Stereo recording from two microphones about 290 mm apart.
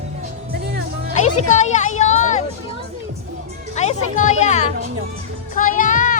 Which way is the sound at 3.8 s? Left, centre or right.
Left.